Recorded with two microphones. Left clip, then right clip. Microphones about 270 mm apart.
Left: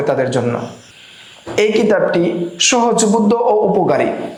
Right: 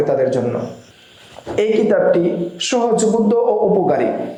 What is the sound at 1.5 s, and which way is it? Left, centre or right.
Speech, left.